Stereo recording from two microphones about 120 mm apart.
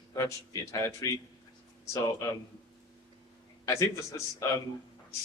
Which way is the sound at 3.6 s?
25° left (ahead or behind).